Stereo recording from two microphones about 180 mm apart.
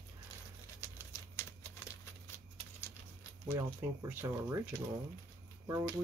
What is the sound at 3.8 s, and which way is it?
Speech, 10° right (ahead or behind).